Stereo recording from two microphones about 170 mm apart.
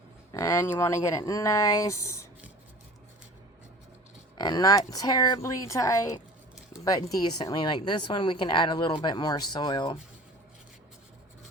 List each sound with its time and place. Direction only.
0.3 s speech: 15° left (ahead or behind)
4.4 s speech: 25° left (ahead or behind)